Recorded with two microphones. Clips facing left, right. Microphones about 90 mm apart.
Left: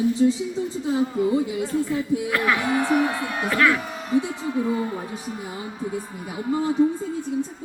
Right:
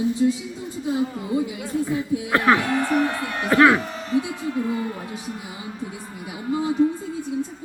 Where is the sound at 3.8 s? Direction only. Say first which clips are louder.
Even; 5° left (ahead or behind).